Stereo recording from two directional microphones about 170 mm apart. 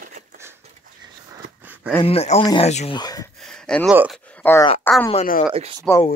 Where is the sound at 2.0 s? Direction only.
35° left (ahead or behind).